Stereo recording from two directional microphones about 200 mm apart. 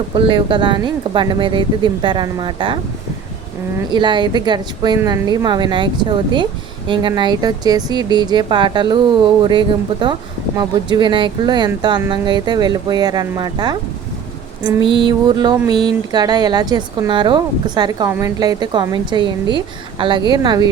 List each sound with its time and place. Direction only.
0.1 s a woman's voice: 25° right (ahead or behind)
3.8 s a woman's voice: 20° right (ahead or behind)